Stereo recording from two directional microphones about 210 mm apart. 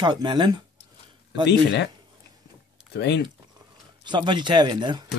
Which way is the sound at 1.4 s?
55° left (ahead or behind).